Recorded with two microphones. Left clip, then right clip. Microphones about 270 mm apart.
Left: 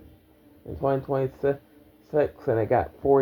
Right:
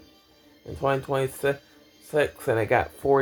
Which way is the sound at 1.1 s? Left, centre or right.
Right.